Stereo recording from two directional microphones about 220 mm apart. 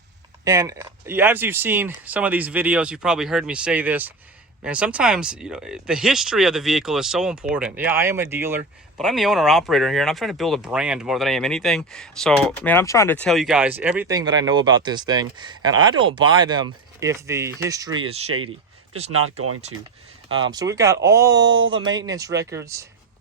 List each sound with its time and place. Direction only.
0.4 s speech: 15° right (ahead or behind)
9.0 s speech: centre (ahead or behind)
19.1 s speech: 80° right
20.2 s speech: 65° right (ahead or behind)
20.5 s speech: 15° right (ahead or behind)